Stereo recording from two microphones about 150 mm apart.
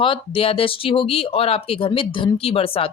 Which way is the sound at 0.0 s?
35° left (ahead or behind).